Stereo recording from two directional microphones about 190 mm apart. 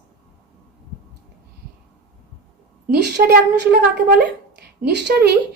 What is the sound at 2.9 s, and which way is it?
A woman's voice, 60° right (ahead or behind).